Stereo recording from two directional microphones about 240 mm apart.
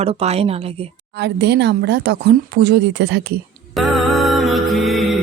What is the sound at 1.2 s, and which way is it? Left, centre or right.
Speech, right.